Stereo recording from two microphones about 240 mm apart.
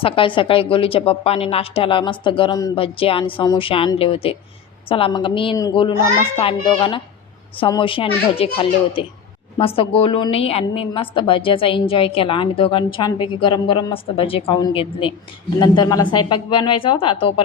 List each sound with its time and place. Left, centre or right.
0.0 s a woman's voice: left